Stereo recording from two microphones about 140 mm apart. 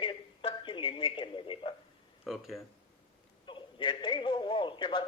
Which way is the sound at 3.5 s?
35° left (ahead or behind).